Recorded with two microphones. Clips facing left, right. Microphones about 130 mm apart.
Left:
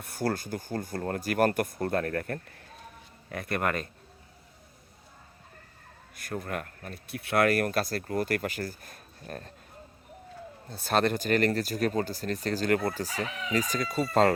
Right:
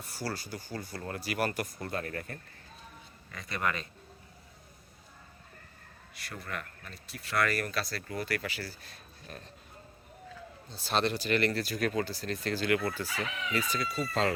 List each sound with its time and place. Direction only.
0.0 s a man's voice: 55° left (ahead or behind)
6.1 s speech: 50° left (ahead or behind)
10.7 s speech: 55° left (ahead or behind)